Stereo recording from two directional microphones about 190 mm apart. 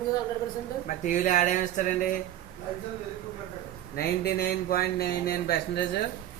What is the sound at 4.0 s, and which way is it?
Speech, 55° left (ahead or behind).